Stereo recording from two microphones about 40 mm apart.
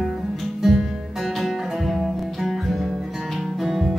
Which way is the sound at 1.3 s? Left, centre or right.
Centre.